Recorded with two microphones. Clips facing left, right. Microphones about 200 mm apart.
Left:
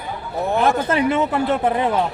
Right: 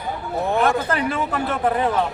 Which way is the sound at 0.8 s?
25° left (ahead or behind).